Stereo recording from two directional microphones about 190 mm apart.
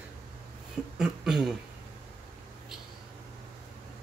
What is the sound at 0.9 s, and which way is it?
Speech, 5° right (ahead or behind).